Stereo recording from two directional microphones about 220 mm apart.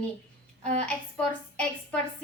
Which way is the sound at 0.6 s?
30° right (ahead or behind).